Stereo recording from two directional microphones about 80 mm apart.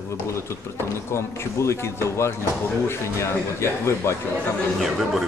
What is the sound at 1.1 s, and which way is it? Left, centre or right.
Speech, left.